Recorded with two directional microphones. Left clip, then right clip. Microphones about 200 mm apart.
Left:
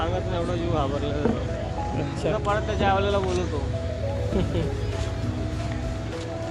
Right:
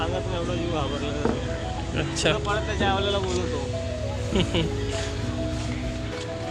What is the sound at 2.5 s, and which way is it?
Speech, 25° left (ahead or behind).